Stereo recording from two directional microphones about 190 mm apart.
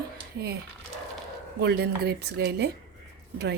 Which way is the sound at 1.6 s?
60° right (ahead or behind).